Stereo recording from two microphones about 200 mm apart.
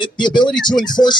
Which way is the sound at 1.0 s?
5° left (ahead or behind).